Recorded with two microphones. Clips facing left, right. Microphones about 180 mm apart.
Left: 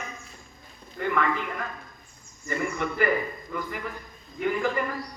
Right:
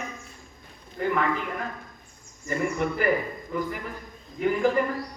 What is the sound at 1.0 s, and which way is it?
A man's voice, 35° right (ahead or behind).